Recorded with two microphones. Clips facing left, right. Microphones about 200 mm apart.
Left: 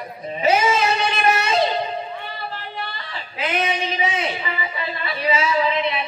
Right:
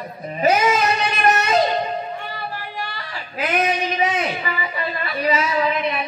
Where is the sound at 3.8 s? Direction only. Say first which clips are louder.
Right 2 dB; 25° left (ahead or behind).